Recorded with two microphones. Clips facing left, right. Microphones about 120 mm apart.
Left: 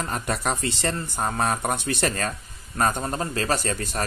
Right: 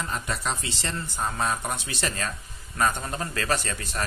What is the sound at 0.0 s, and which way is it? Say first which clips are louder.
Speech: left 4 dB; 50° left (ahead or behind).